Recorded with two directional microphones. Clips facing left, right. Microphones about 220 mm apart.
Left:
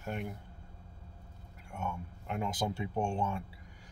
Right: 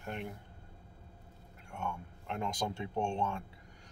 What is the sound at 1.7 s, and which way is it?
Speech, 5° left (ahead or behind).